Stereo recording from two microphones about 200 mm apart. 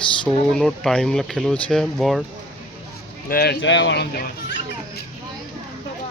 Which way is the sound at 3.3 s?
55° left (ahead or behind).